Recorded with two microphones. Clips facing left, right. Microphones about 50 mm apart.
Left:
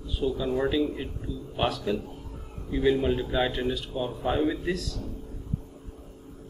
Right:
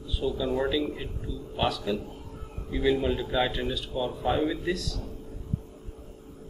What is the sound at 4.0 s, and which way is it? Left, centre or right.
Speech, centre.